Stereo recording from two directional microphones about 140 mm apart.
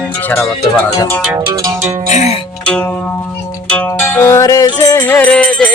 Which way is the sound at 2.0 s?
55° left (ahead or behind).